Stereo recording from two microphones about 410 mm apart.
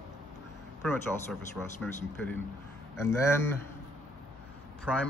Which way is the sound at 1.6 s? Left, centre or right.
Centre.